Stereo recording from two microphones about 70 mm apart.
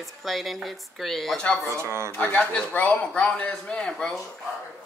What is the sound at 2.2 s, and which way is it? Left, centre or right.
Speech, left.